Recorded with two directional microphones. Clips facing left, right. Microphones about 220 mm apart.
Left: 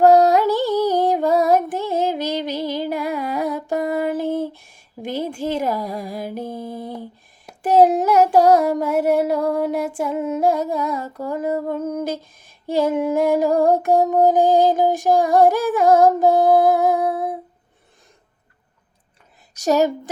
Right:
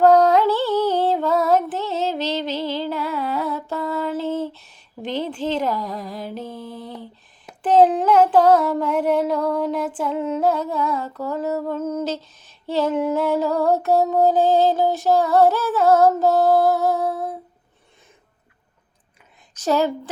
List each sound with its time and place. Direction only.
0.0 s music: 10° left (ahead or behind)
7.6 s a sound: 10° left (ahead or behind)
11.3 s music: 10° left (ahead or behind)
11.7 s female singing: 15° left (ahead or behind)
14.1 s music: 15° left (ahead or behind)
19.6 s a woman's voice: 40° left (ahead or behind)